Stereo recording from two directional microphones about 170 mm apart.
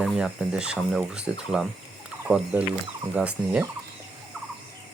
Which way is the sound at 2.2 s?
10° right (ahead or behind).